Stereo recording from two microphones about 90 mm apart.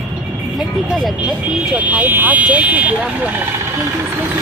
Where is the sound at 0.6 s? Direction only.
5° right (ahead or behind).